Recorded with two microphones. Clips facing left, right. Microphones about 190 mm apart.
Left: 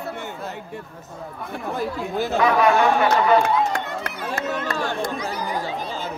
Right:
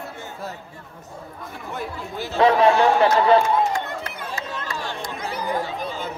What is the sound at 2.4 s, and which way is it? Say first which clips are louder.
Speech: right 3 dB; 30° right (ahead or behind).